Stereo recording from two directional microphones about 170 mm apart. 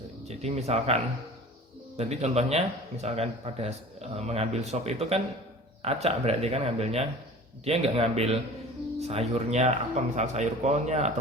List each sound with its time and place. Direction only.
0.3 s speech: 40° right (ahead or behind)
2.0 s speech: 40° right (ahead or behind)